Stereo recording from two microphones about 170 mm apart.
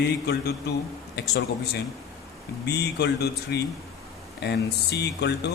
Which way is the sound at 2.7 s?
75° left (ahead or behind).